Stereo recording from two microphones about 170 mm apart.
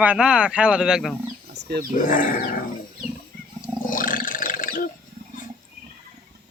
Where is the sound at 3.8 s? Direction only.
55° left (ahead or behind).